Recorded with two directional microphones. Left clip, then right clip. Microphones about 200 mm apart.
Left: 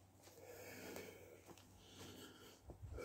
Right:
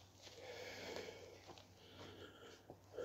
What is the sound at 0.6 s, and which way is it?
Sniff, 45° left (ahead or behind).